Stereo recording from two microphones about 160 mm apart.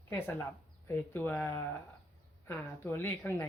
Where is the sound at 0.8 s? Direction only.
15° left (ahead or behind).